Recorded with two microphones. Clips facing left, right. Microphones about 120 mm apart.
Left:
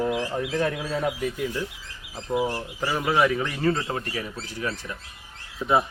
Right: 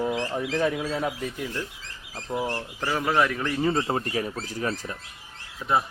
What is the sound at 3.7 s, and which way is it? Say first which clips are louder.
Speech: right 3 dB; 35° right (ahead or behind).